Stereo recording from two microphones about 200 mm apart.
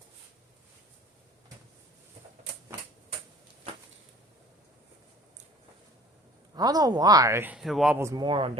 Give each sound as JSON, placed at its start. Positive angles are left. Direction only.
{"t": 6.6, "sound": "speech", "side_deg": -20}
{"t": 7.9, "sound": "speech", "side_deg": -15}